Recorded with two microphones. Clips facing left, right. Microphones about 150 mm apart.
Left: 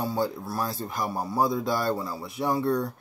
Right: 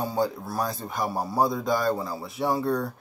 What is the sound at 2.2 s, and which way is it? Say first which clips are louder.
Speech: right 2 dB; centre (ahead or behind).